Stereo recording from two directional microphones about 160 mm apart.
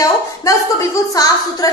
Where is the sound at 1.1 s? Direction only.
20° left (ahead or behind).